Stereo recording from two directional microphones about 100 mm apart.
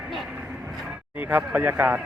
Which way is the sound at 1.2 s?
15° right (ahead or behind).